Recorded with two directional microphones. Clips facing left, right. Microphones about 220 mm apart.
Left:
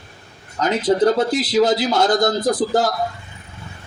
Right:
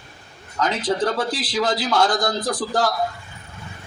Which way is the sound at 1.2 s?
25° left (ahead or behind).